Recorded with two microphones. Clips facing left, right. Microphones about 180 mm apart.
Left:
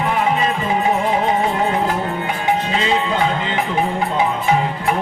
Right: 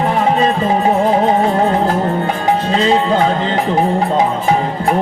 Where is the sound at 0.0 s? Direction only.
40° right (ahead or behind).